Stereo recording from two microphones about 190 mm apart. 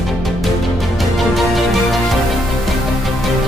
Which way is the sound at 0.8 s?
Centre (ahead or behind).